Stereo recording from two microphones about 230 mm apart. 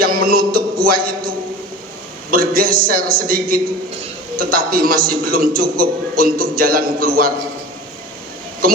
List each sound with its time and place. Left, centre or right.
0.0 s music: right
2.3 s a man's voice: right